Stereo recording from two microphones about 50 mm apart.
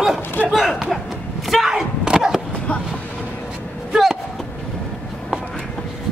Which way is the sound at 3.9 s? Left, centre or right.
Centre.